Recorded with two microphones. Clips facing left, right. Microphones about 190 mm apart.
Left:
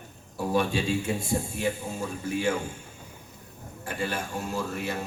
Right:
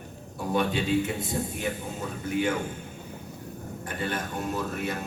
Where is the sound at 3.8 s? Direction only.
30° left (ahead or behind).